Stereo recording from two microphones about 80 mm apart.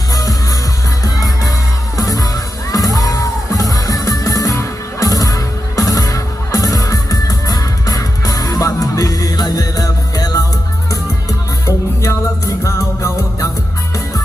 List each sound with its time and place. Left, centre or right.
0.1 s music: left